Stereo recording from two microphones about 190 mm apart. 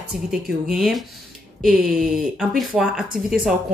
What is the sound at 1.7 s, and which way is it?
Speech, 50° right (ahead or behind).